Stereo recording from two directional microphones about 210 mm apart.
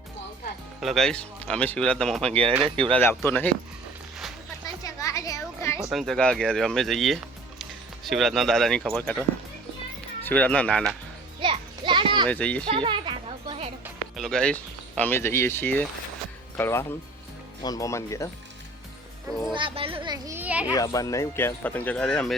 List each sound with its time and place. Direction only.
0.8 s speech: centre (ahead or behind)
2.3 s a child's voice: 25° right (ahead or behind)
3.2 s speech: 10° left (ahead or behind)
4.6 s music: 15° left (ahead or behind)
5.8 s speech: centre (ahead or behind)
10.2 s speech: 5° left (ahead or behind)
11.3 s children playing: 25° right (ahead or behind)
12.3 s speech: 5° left (ahead or behind)
12.6 s music: 25° right (ahead or behind)
13.8 s speech: centre (ahead or behind)
19.5 s a child's voice: 25° right (ahead or behind); by 20.7 s 5° right (ahead or behind)
20.7 s speech: 15° left (ahead or behind)